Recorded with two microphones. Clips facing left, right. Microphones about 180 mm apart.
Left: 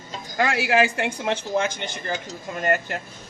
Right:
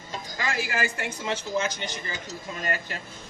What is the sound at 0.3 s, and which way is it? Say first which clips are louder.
Speech: left 9 dB; 65° left (ahead or behind).